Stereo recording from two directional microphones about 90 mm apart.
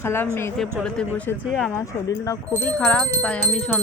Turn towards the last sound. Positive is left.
turn(degrees=10)  # may be behind; listen again after turning